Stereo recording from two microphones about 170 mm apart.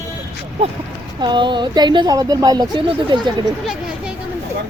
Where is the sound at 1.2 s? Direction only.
25° right (ahead or behind).